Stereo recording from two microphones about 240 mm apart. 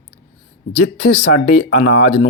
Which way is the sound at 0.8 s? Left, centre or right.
Left.